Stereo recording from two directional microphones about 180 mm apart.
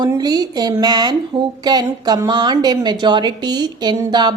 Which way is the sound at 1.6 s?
20° right (ahead or behind).